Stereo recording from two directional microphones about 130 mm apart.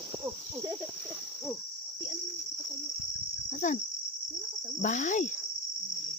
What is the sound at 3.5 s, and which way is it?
Cricket, 70° left (ahead or behind).